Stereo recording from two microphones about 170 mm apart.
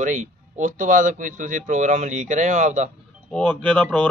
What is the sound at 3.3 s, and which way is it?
Speech, 5° left (ahead or behind).